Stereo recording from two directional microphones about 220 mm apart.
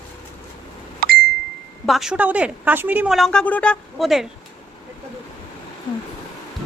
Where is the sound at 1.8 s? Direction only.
Centre (ahead or behind).